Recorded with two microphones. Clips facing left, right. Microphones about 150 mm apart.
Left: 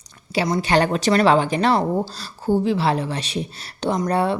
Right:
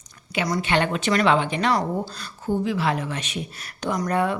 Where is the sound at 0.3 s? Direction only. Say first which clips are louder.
Left 4 dB; 25° left (ahead or behind).